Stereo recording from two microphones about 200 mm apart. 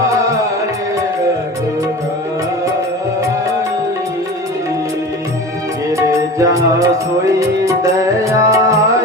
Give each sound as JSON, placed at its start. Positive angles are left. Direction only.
{"t": 6.1, "sound": "music", "side_deg": -15}